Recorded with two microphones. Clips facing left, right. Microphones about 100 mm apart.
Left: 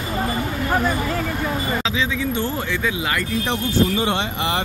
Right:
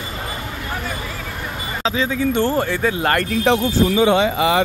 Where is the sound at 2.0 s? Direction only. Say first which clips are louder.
Right 4 dB; 45° right (ahead or behind); by 3.5 s 60° right (ahead or behind).